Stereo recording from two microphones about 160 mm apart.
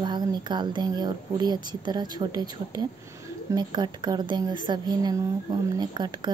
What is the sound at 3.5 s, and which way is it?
A woman's voice, 25° right (ahead or behind).